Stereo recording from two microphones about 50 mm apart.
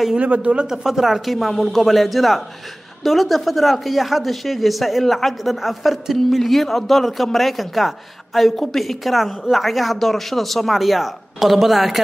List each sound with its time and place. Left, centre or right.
0.2 s speech: right
0.7 s speech: centre